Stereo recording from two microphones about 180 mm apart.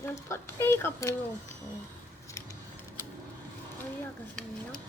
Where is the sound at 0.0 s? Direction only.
15° left (ahead or behind).